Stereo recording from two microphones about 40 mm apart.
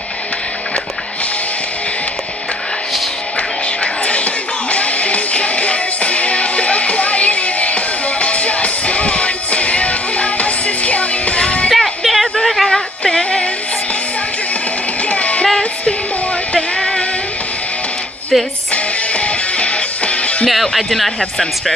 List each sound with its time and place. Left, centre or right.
3.3 s music: left
11.7 s a sound: centre
13.0 s music: centre
15.0 s child singing: left
16.5 s music: centre
18.3 s speech: centre
18.7 s music: left
20.4 s speech: centre